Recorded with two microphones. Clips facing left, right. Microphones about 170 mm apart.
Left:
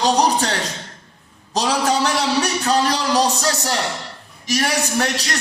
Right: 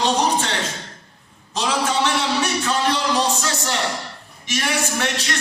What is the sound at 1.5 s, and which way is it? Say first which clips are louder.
A man's voice: left 3 dB; 40° left (ahead or behind).